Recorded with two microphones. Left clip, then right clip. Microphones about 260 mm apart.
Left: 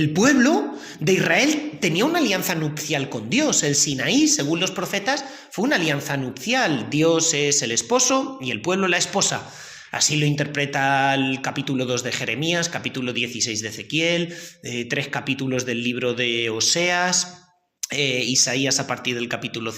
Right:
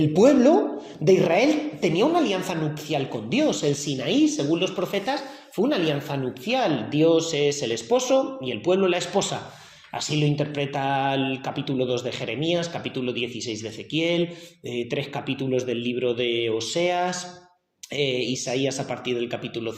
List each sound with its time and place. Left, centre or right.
0.0 s a woman's voice: left